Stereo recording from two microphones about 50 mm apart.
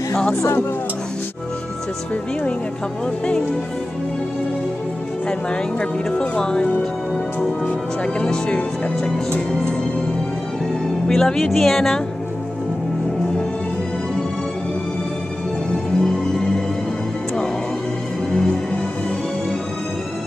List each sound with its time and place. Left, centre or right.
0.4 s speech: left
6.0 s speech: centre
8.0 s speech: centre
11.1 s speech: centre
16.0 s music: centre